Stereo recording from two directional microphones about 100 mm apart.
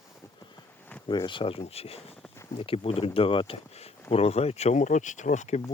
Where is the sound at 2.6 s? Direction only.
70° left (ahead or behind).